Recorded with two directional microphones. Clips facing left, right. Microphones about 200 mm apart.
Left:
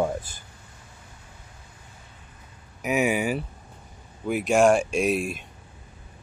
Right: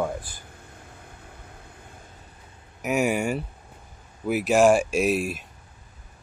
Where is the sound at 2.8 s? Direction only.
Centre (ahead or behind).